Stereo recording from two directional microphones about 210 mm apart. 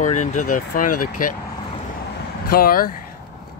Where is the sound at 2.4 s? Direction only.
45° left (ahead or behind).